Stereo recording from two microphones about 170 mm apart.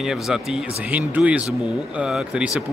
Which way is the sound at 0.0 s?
5° right (ahead or behind).